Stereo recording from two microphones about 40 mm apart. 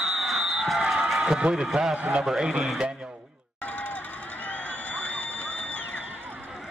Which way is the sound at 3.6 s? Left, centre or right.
Left.